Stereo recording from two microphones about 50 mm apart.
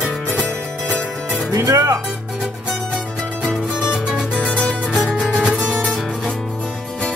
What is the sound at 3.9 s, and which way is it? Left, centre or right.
Music, centre.